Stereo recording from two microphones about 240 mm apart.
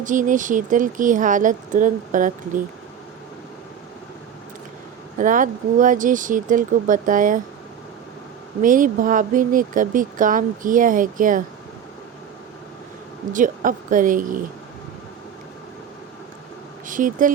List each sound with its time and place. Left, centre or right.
0.0 s speech: right
5.1 s speech: right
8.6 s speech: right
13.3 s speech: right
16.8 s speech: right